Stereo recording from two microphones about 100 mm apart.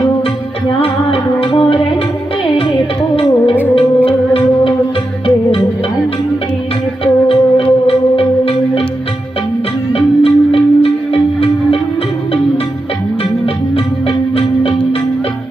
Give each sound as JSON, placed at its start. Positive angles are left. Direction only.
{"t": 0.8, "sound": "music", "side_deg": 65}
{"t": 3.8, "sound": "music", "side_deg": 65}
{"t": 7.0, "sound": "music", "side_deg": 70}
{"t": 9.9, "sound": "music", "side_deg": 75}